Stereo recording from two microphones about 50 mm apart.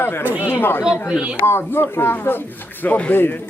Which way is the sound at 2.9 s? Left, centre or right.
Left.